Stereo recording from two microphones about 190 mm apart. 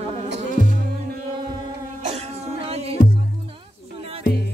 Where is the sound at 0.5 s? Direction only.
45° right (ahead or behind).